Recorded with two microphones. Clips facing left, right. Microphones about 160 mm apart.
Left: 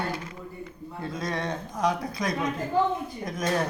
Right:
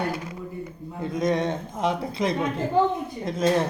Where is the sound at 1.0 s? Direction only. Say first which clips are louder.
Right 7 dB; 20° right (ahead or behind).